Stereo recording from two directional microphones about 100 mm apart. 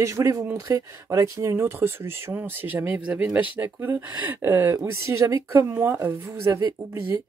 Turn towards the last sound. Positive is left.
turn(degrees=-30)  # may be behind; listen again after turning